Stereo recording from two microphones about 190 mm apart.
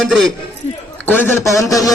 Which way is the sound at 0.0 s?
Centre (ahead or behind).